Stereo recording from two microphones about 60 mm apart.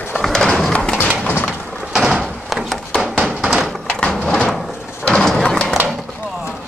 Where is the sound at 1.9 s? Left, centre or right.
Centre.